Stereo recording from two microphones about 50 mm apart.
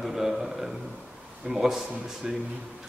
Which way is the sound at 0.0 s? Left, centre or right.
Centre.